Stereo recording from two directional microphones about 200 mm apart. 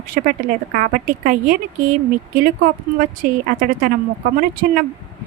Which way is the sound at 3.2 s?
45° right (ahead or behind).